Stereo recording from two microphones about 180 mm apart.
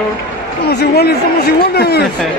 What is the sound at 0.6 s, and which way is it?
A man's voice, 60° left (ahead or behind).